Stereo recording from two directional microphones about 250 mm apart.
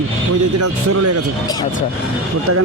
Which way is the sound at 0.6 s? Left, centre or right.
Right.